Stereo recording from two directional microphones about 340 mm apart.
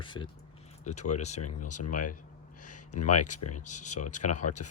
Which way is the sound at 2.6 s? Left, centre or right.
Left.